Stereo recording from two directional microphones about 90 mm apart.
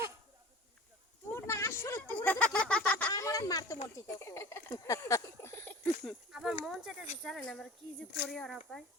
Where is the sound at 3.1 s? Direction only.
40° left (ahead or behind).